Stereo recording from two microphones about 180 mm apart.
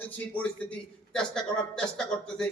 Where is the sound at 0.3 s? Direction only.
5° left (ahead or behind).